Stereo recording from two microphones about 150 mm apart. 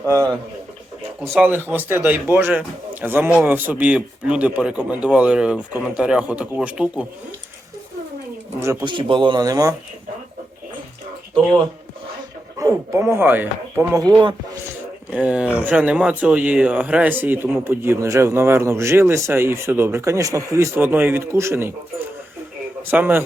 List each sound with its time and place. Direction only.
1.5 s speech: 15° right (ahead or behind)
8.8 s speech: 35° right (ahead or behind)
12.5 s speech: 20° right (ahead or behind)
15.1 s speech: 10° right (ahead or behind)